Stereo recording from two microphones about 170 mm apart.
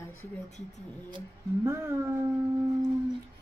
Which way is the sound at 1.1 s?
15° right (ahead or behind).